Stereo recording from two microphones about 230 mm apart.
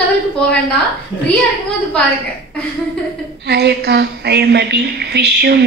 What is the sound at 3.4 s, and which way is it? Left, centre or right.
Speech, right.